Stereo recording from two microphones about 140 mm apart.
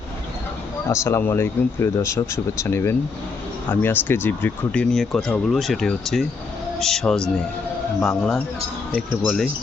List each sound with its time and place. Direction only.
0.9 s speech: 20° left (ahead or behind); by 9.5 s centre (ahead or behind)